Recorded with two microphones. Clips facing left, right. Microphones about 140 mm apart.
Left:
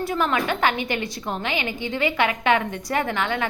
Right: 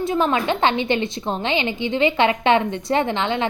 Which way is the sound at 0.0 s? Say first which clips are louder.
Right 3 dB; 25° right (ahead or behind).